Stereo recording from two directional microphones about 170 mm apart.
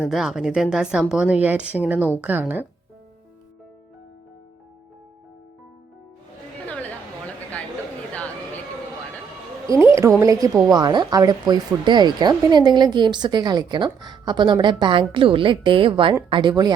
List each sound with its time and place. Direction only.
0.0 s speech: centre (ahead or behind)
9.6 s speech: 15° right (ahead or behind)